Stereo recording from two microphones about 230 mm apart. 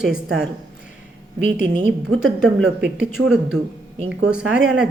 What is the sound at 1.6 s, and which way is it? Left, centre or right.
Speech, right.